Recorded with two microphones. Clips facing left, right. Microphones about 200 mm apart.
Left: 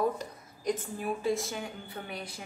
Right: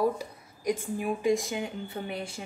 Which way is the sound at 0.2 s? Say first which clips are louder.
Right 2 dB; 10° right (ahead or behind).